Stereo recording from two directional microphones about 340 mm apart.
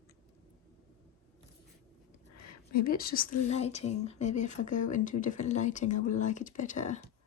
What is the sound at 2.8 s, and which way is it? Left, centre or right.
A woman's voice, left.